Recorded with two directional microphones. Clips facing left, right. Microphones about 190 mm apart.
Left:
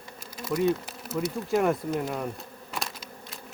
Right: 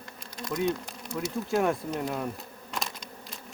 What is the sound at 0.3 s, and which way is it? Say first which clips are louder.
Speech: left 4 dB; 5° left (ahead or behind).